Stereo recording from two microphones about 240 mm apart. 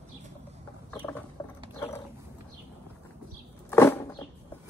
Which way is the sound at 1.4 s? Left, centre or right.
Centre.